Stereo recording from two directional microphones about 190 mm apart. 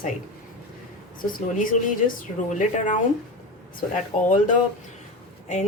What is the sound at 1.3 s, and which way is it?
A woman's voice, 45° left (ahead or behind).